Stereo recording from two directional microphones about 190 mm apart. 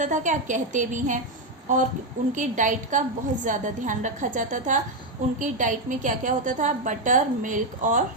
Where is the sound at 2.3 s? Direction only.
40° right (ahead or behind).